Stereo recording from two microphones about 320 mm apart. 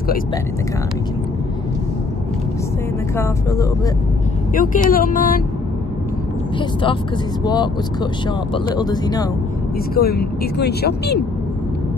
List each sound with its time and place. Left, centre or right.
3.2 s speech: centre
4.6 s speech: left
7.4 s speech: centre
9.9 s speech: left